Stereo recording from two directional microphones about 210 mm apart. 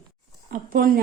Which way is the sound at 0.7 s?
45° right (ahead or behind).